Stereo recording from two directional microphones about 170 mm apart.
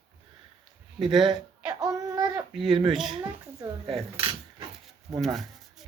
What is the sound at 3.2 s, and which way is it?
Speech, 25° right (ahead or behind).